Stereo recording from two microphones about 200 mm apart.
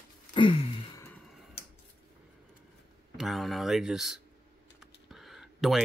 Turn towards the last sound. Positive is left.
turn(degrees=0)  # may be behind; listen again after turning